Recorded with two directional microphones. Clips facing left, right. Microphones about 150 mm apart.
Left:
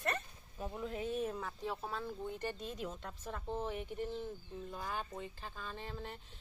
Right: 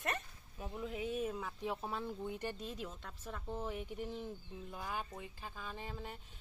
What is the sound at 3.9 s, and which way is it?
Speech, 10° right (ahead or behind).